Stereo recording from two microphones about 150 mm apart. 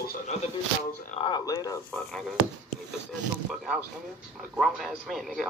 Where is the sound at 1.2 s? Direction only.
25° left (ahead or behind).